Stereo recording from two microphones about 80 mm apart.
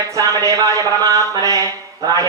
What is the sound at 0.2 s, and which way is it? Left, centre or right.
Speech, right.